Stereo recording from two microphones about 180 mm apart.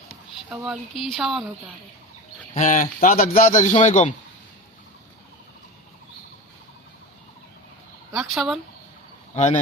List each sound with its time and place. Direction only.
0.5 s speech: 5° right (ahead or behind)
2.6 s a man's voice: 45° left (ahead or behind)
8.1 s speech: centre (ahead or behind)
9.3 s speech: 40° left (ahead or behind)